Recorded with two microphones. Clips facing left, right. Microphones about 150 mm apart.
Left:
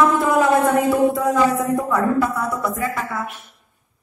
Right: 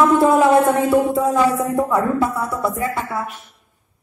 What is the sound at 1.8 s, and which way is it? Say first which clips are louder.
Speech: right 3 dB; 25° right (ahead or behind).